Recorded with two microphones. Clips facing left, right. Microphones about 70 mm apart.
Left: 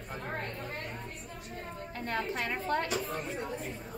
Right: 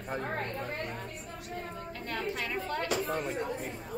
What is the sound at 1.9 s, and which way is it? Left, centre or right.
Speech, left.